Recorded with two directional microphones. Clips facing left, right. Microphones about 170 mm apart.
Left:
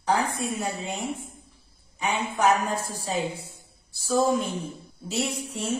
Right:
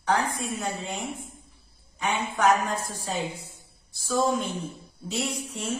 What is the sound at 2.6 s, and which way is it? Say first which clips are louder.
Speech: left 1 dB; 30° left (ahead or behind).